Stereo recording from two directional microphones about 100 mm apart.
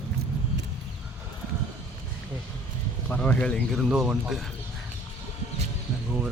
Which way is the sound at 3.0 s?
15° left (ahead or behind).